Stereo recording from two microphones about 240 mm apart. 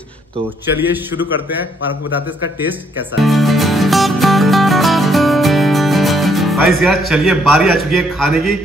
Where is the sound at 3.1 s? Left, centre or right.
Centre.